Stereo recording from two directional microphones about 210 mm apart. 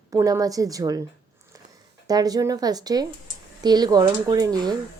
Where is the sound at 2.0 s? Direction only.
20° right (ahead or behind).